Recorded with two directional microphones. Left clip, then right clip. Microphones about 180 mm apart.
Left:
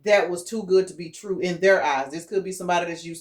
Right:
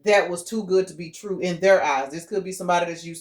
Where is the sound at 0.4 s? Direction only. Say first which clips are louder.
Left 1 dB; 35° right (ahead or behind).